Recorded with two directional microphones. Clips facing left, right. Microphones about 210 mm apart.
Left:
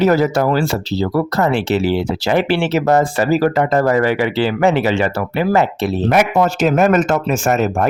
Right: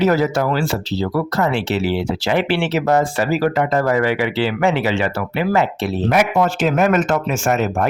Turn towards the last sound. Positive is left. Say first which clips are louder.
# left 2 dB
turn(degrees=40)  # may be behind; listen again after turning